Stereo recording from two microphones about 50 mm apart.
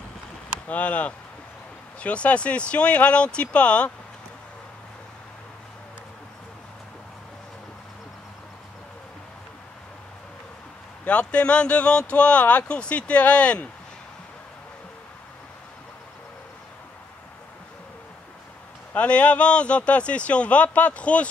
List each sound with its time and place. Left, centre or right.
0.7 s speech: left
11.1 s speech: left
18.9 s speech: left